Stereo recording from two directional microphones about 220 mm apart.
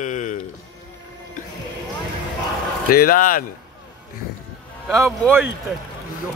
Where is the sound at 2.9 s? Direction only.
40° left (ahead or behind).